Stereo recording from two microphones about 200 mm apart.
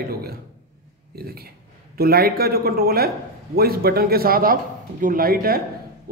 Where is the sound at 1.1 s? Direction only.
50° right (ahead or behind).